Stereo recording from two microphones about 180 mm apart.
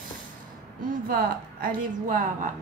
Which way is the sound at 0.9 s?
50° right (ahead or behind).